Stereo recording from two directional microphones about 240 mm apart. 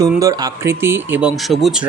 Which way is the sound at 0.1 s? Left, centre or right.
Centre.